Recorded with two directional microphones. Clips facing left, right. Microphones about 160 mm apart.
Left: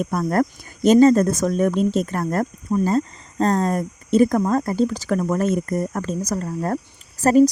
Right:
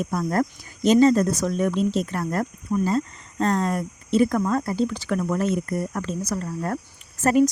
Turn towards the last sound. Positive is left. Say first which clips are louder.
# left 4 dB
turn(degrees=35)  # may be behind; listen again after turning